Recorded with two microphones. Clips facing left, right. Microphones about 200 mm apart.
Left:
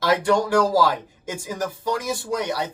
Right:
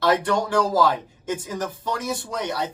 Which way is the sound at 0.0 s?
10° left (ahead or behind).